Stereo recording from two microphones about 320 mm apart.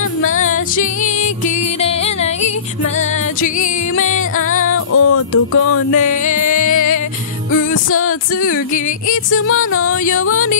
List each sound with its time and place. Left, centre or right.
0.4 s music: left
4.5 s music: left
6.2 s music: left
7.7 s music: left
9.1 s music: left